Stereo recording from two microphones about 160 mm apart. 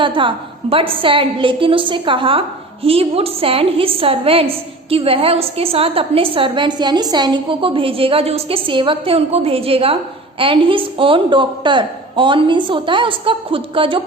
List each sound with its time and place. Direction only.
0.0 s a woman's voice: 30° right (ahead or behind)